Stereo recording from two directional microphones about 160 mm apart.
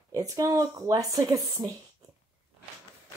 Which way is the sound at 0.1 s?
20° right (ahead or behind).